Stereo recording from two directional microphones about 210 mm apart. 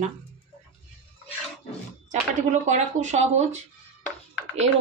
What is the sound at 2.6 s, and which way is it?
Speech, 35° right (ahead or behind).